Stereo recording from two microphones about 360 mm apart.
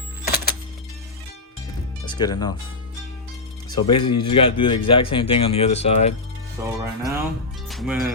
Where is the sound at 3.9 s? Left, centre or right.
Centre.